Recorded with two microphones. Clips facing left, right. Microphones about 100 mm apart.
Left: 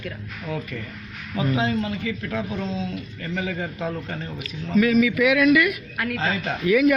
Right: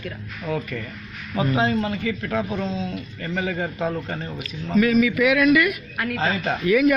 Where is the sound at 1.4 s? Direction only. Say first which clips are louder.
Right 2 dB; 40° right (ahead or behind).